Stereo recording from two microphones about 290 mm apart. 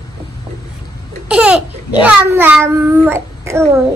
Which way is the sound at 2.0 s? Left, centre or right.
Centre.